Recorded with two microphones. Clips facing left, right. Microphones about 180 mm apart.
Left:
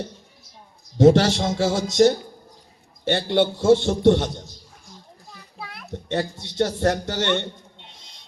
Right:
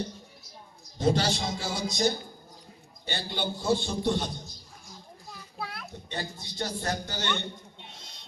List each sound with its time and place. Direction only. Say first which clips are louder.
0.9 s a man's voice: left 11 dB; 75° left (ahead or behind)
5.5 s a sound: right 1 dB; centre (ahead or behind)
6.1 s a man's voice: left 12 dB; 75° left (ahead or behind)